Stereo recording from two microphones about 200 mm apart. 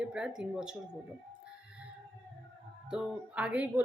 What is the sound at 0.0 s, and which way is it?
Speech, 5° right (ahead or behind).